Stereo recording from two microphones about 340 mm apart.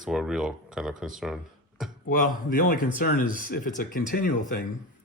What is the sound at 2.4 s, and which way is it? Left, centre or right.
Speech, left.